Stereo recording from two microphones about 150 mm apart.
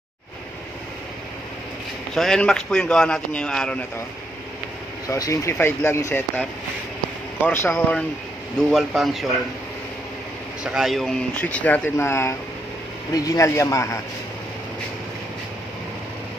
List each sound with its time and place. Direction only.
2.1 s speech: 5° left (ahead or behind)
5.0 s speech: 20° left (ahead or behind)
7.4 s speech: 15° left (ahead or behind)
8.5 s speech: centre (ahead or behind)
10.6 s speech: 5° right (ahead or behind); by 13.9 s 20° left (ahead or behind)